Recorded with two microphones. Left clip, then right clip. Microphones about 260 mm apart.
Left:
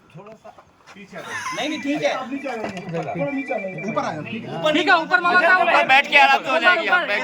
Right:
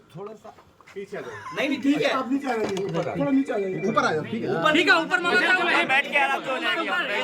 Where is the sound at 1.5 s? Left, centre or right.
Centre.